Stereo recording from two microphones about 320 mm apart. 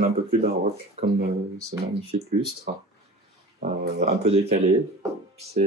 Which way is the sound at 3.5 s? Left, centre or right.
Right.